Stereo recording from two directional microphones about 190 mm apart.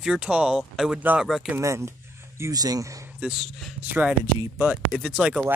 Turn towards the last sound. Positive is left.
turn(degrees=-5)  # may be behind; listen again after turning